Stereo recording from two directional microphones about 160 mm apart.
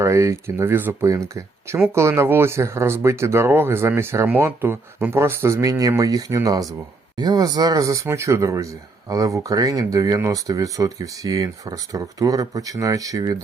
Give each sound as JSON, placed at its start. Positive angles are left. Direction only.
{"t": 0.0, "sound": "speech", "side_deg": -20}